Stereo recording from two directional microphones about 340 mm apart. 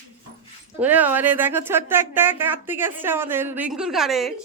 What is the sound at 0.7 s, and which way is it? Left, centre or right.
Speech, centre.